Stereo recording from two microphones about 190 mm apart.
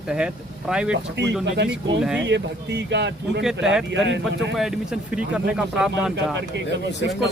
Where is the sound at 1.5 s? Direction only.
60° right (ahead or behind).